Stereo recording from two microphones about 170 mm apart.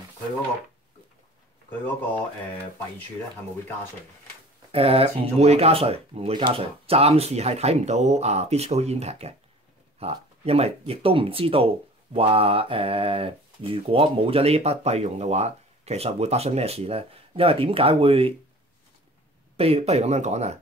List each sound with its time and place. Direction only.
4.7 s speech: 35° right (ahead or behind)
19.5 s speech: 35° right (ahead or behind)